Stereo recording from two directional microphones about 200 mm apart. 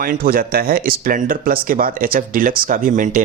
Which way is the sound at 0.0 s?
50° right (ahead or behind).